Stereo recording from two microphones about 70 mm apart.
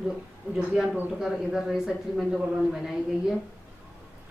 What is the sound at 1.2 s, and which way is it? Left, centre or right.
A woman's voice, centre.